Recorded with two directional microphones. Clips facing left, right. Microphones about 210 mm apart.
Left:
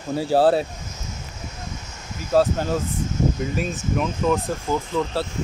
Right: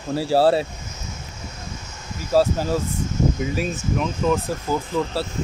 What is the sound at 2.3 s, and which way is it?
Speech, 5° right (ahead or behind).